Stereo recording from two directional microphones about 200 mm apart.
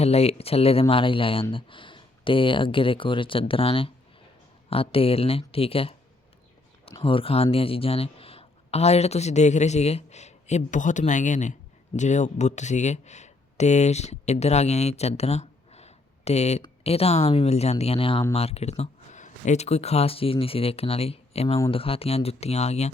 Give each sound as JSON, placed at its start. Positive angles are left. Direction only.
{"t": 0.0, "sound": "speech", "side_deg": 30}
{"t": 7.0, "sound": "speech", "side_deg": 25}